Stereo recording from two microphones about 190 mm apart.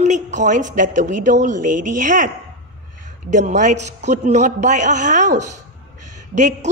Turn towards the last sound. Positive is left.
turn(degrees=-40)  # may be behind; listen again after turning